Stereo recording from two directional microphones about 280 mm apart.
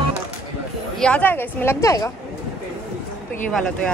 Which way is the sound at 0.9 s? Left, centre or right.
Centre.